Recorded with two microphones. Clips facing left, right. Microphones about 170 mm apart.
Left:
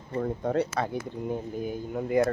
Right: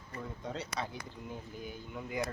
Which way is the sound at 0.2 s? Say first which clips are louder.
Left 14 dB; 55° left (ahead or behind).